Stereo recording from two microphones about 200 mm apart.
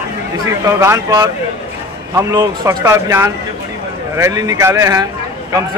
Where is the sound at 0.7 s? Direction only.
15° right (ahead or behind).